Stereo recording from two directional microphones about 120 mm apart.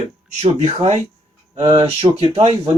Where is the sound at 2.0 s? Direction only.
55° right (ahead or behind).